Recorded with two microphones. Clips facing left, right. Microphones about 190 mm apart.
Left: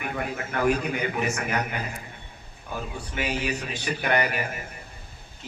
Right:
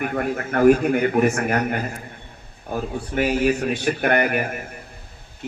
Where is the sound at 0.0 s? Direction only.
50° right (ahead or behind).